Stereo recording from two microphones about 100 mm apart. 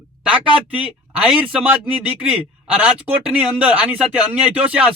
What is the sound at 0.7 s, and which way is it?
A man's voice, 10° right (ahead or behind).